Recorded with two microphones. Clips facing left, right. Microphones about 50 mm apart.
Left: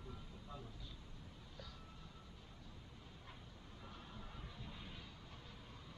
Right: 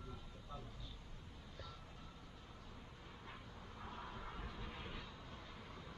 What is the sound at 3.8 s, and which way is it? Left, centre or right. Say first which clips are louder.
Vehicle: right 6 dB; right.